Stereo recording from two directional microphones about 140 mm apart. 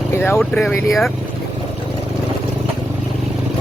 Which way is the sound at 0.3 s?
Centre (ahead or behind).